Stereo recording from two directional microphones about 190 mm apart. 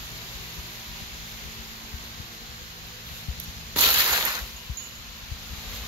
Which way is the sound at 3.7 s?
20° right (ahead or behind).